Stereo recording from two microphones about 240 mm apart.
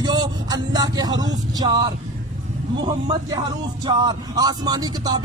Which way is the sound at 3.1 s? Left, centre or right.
Centre.